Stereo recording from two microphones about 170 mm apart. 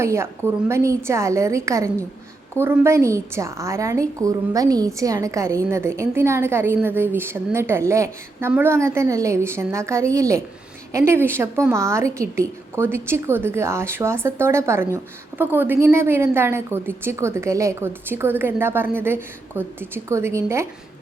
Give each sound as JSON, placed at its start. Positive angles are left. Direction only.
{"t": 0.0, "sound": "a woman's voice", "side_deg": -15}